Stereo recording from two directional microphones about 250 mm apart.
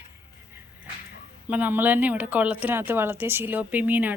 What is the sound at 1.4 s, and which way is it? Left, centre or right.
Speech, centre.